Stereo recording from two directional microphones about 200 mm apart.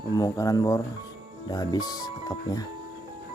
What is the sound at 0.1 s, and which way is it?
Speech, 20° left (ahead or behind).